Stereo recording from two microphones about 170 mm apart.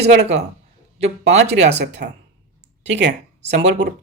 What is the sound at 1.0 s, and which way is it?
Speech, 40° right (ahead or behind).